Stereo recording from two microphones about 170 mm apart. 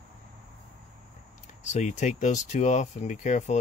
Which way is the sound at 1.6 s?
45° left (ahead or behind).